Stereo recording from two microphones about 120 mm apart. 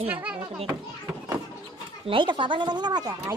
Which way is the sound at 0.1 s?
10° right (ahead or behind).